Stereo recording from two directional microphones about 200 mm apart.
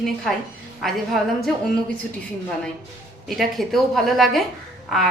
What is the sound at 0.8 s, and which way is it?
Speech, centre (ahead or behind).